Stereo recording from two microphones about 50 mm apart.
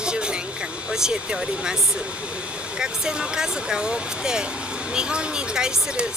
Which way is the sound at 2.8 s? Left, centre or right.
Centre.